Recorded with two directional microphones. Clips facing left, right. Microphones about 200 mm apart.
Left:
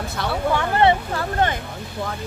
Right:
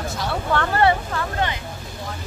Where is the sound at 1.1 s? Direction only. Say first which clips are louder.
Left 3 dB; 50° left (ahead or behind).